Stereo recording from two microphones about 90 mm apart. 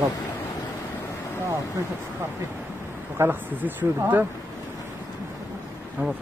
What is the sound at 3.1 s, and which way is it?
Speech, 25° right (ahead or behind).